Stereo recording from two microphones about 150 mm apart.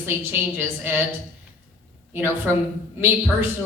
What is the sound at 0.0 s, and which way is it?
Speech, 15° right (ahead or behind).